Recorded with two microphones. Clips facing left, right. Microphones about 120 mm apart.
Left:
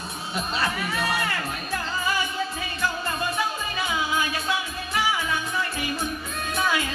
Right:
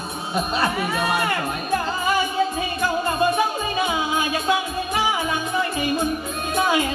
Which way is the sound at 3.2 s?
20° right (ahead or behind).